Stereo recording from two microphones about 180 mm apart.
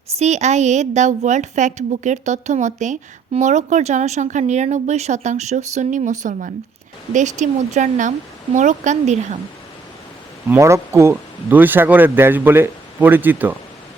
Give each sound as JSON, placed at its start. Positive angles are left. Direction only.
{"t": 0.2, "sound": "a woman's voice", "side_deg": -40}
{"t": 10.5, "sound": "speech", "side_deg": -15}